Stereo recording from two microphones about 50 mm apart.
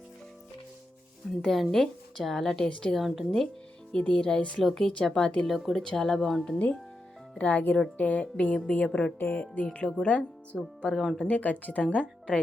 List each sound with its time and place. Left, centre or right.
1.4 s speech: centre
2.6 s speech: left
3.0 s speech: centre
3.9 s speech: centre
4.5 s speech: centre
5.5 s speech: centre
5.7 s speech: centre
7.3 s speech: left
9.1 s speech: left
10.5 s speech: centre
11.2 s speech: left